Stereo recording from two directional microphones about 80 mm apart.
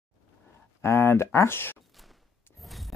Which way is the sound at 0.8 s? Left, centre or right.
Left.